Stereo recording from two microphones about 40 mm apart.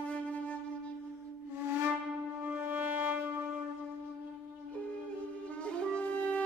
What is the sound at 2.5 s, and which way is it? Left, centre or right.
Wind instrument, right.